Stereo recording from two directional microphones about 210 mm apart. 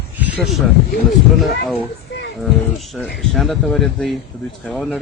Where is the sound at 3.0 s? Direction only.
Centre (ahead or behind).